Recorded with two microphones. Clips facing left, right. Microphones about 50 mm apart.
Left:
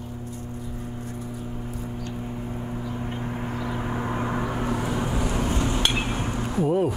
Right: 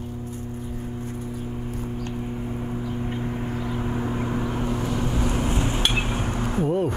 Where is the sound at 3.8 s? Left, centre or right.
Left.